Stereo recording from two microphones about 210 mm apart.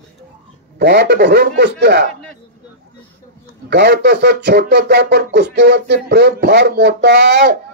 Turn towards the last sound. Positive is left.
turn(degrees=-50)  # may be behind; listen again after turning